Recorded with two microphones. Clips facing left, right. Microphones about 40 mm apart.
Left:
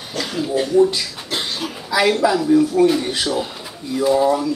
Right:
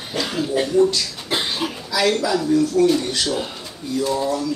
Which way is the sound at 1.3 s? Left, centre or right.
Centre.